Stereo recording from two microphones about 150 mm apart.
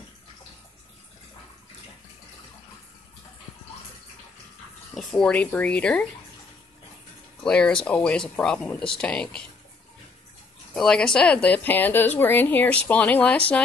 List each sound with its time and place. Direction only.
4.9 s speech: 5° left (ahead or behind)
7.4 s speech: 5° left (ahead or behind)
10.7 s speech: 5° left (ahead or behind)